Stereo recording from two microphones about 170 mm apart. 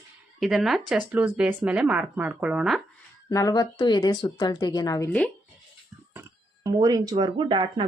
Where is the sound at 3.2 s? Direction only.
20° left (ahead or behind).